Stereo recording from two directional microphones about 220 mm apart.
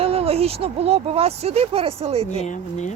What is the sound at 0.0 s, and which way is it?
Speech, 25° right (ahead or behind).